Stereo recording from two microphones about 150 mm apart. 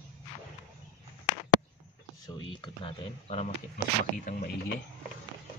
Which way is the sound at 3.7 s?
65° left (ahead or behind).